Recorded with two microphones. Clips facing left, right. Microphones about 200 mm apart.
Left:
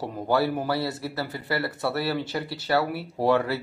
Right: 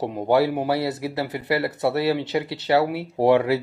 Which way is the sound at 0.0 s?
20° right (ahead or behind).